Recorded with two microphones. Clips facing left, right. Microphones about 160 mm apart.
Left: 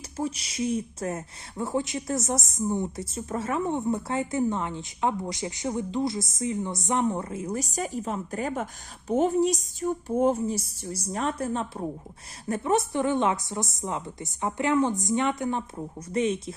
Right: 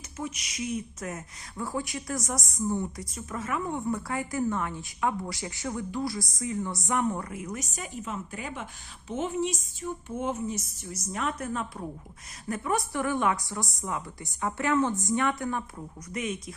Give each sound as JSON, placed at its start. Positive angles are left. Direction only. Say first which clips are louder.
{"t": 0.2, "sound": "speech", "louder": "left 6 dB", "side_deg": 30}